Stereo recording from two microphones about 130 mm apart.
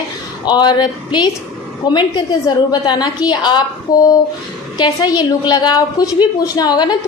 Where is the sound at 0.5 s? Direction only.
35° left (ahead or behind).